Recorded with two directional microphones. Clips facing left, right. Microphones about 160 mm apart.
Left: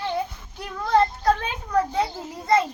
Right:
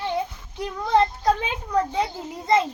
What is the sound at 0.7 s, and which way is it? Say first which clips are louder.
Child singing: even; 15° right (ahead or behind).